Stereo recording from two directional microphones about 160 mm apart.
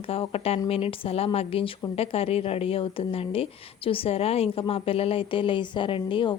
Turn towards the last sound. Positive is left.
turn(degrees=30)  # may be behind; listen again after turning